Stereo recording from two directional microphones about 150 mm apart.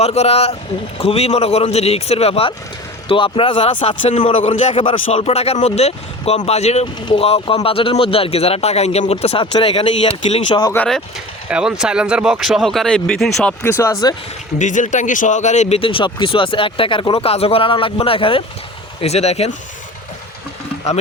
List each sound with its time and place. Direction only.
0.0 s speech: 45° left (ahead or behind)
10.8 s speech: centre (ahead or behind)
14.6 s speech: 55° left (ahead or behind)